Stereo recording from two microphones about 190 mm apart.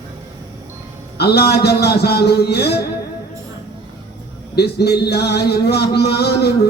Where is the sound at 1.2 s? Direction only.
55° left (ahead or behind).